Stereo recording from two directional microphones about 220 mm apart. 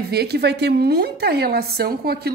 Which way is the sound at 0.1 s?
45° right (ahead or behind).